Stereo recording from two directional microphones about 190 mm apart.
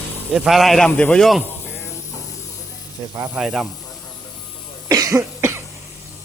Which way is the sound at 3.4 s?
Centre (ahead or behind).